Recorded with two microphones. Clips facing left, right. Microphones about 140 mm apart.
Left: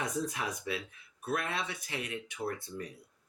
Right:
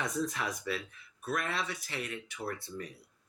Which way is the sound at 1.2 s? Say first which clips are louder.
Even; 20° left (ahead or behind).